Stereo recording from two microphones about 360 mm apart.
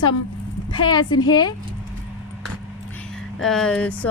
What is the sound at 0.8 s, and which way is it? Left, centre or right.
Speech, centre.